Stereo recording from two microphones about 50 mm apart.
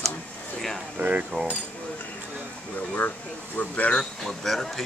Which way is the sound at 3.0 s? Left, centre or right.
Left.